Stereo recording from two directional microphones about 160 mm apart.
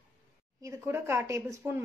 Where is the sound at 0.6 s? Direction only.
15° right (ahead or behind).